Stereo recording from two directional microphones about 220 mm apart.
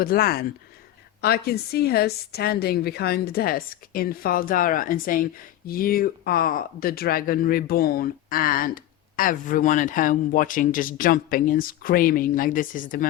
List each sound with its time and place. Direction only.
0.0 s a woman's voice: 40° left (ahead or behind)